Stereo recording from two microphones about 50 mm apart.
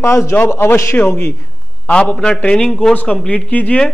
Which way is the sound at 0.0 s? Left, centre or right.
Left.